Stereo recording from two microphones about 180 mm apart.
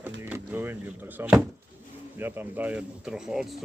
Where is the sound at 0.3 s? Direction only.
10° right (ahead or behind).